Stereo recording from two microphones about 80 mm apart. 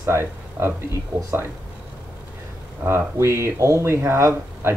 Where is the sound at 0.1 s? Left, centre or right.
Right.